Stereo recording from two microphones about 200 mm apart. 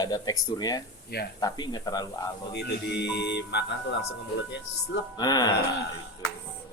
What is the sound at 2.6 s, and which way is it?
Music, 60° left (ahead or behind).